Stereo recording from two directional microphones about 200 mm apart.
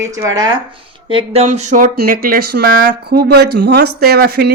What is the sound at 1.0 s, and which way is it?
Speech, 30° right (ahead or behind).